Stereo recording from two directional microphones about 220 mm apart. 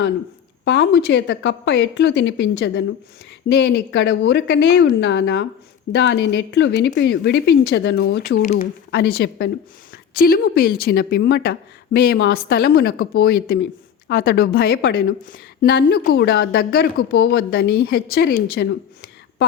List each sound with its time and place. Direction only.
0.6 s a woman's voice: 50° left (ahead or behind)